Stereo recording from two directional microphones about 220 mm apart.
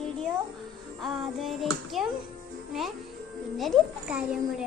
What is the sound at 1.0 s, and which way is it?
Child singing, centre (ahead or behind).